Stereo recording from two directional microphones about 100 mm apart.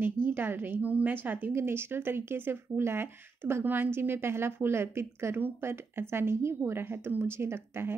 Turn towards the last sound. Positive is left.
turn(degrees=-25)  # may be behind; listen again after turning